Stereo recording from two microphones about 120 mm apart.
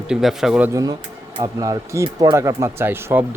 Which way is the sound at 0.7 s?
30° right (ahead or behind).